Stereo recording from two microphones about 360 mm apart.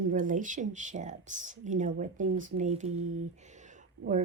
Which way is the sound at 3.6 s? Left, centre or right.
Right.